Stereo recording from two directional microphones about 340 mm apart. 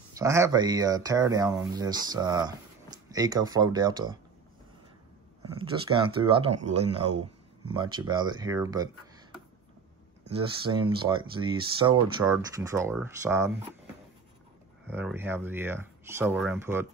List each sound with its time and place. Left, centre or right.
0.1 s speech: centre
6.2 s speech: centre
10.3 s speech: centre
14.9 s speech: centre